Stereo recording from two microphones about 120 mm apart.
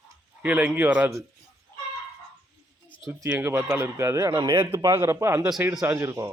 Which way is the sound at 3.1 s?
20° right (ahead or behind).